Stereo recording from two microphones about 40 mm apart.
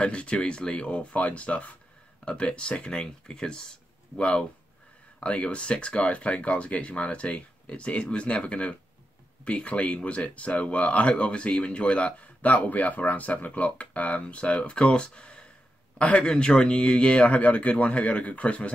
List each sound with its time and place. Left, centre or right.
0.0 s speech: left